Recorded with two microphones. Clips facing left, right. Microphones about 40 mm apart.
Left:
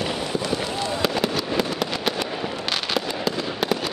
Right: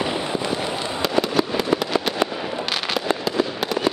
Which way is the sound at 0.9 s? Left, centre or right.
Centre.